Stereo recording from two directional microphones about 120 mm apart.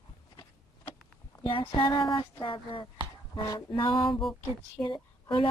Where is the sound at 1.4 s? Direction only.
50° left (ahead or behind).